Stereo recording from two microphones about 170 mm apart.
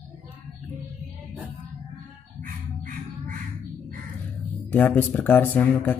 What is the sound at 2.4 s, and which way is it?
Bird, 55° right (ahead or behind).